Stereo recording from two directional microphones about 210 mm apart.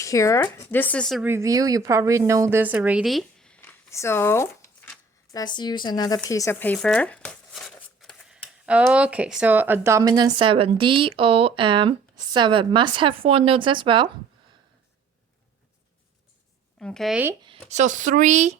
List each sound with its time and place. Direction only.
0.0 s speech: 15° left (ahead or behind)
1.2 s a woman's voice: 10° right (ahead or behind)
16.8 s speech: centre (ahead or behind)
17.4 s speech: 30° right (ahead or behind)